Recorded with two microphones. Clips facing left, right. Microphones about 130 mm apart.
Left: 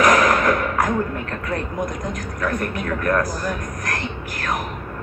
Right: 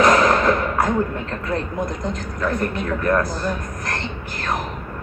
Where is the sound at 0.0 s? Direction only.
25° right (ahead or behind).